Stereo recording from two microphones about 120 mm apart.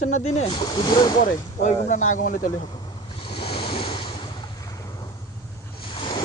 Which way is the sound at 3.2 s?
45° left (ahead or behind).